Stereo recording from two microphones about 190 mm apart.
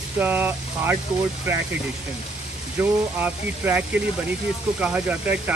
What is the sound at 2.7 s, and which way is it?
Speech, 10° right (ahead or behind).